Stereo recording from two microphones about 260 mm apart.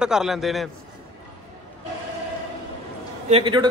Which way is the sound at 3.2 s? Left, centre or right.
Right.